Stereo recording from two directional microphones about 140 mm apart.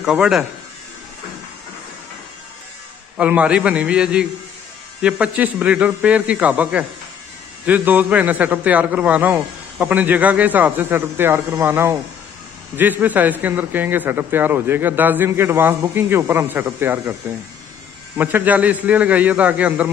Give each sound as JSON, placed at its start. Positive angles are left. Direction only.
{"t": 0.0, "sound": "speech", "side_deg": -5}
{"t": 3.2, "sound": "a man's voice", "side_deg": -10}
{"t": 18.1, "sound": "a man's voice", "side_deg": -15}